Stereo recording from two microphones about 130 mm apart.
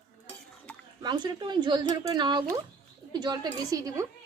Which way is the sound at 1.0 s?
35° right (ahead or behind).